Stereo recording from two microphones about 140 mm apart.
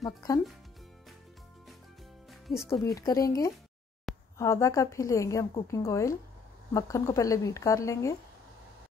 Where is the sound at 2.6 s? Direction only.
25° left (ahead or behind).